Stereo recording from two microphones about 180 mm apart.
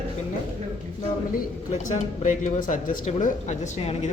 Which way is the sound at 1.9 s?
45° left (ahead or behind).